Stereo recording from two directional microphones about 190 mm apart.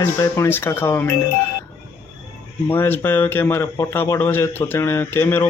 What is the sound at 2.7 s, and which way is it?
A man's voice, 10° left (ahead or behind).